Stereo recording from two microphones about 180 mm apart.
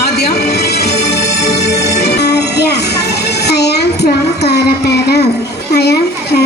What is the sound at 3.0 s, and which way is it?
Child singing, 65° left (ahead or behind).